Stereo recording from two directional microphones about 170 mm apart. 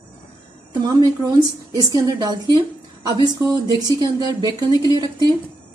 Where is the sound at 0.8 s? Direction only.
25° right (ahead or behind).